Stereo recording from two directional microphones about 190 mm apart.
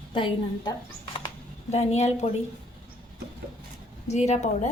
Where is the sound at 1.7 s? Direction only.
35° left (ahead or behind).